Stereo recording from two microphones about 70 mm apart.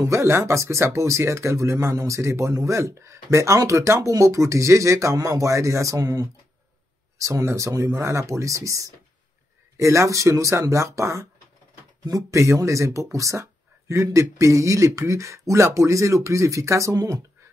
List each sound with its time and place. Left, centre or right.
0.0 s speech: right